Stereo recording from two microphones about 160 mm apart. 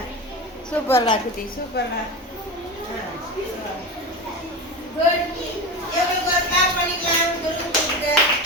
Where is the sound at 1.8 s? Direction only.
90° left.